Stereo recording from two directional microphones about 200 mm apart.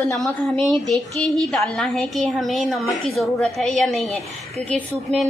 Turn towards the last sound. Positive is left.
turn(degrees=-30)  # may be behind; listen again after turning